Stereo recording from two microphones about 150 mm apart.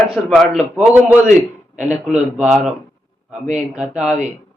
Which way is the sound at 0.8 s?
10° right (ahead or behind).